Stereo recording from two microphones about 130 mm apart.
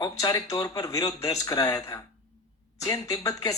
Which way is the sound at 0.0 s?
30° left (ahead or behind).